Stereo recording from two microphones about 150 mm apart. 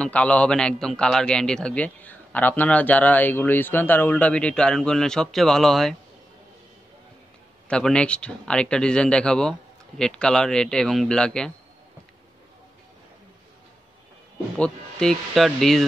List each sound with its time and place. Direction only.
0.0 s a man's voice: 10° left (ahead or behind)
7.6 s speech: 5° left (ahead or behind)
14.6 s speech: 5° left (ahead or behind)